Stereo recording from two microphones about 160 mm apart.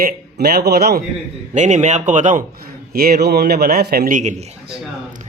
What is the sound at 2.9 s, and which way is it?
A man's voice, 70° right (ahead or behind).